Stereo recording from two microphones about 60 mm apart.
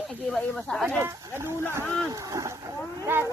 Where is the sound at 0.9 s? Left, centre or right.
Right.